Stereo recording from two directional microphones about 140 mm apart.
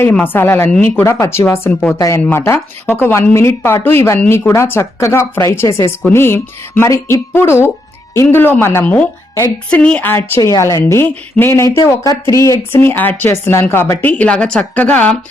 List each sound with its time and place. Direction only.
0.0 s speech: 15° left (ahead or behind)